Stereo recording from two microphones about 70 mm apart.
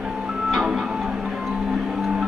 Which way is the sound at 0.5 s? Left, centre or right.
Centre.